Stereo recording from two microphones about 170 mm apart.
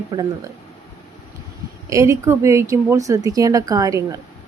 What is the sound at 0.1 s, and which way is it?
Speech, 25° right (ahead or behind).